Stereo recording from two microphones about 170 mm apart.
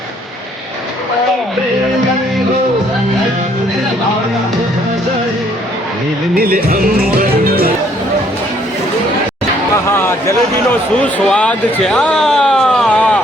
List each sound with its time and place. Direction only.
6.3 s music: 60° right (ahead or behind)
10.0 s a man's voice: 15° left (ahead or behind)